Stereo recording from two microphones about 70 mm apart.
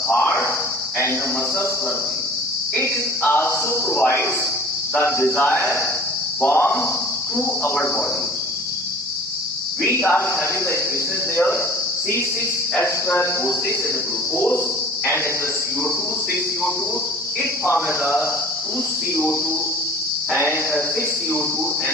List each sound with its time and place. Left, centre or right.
0.1 s cricket: left
2.7 s a man's voice: left
9.8 s a man's voice: left
12.7 s a man's voice: left
19.1 s a man's voice: left